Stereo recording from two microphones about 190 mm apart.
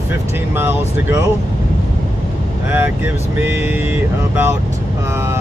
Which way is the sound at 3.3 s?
10° right (ahead or behind).